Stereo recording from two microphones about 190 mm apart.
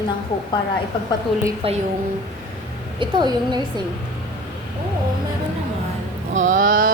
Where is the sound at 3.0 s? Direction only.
25° right (ahead or behind).